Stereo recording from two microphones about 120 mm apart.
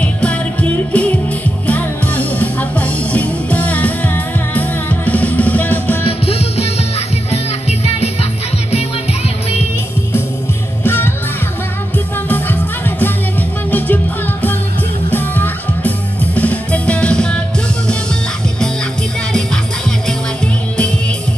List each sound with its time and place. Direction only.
0.0 s music: 10° left (ahead or behind)
6.0 s music: 60° left (ahead or behind)
10.8 s music: 20° left (ahead or behind)
12.3 s music: 15° left (ahead or behind)
15.0 s music: 15° left (ahead or behind)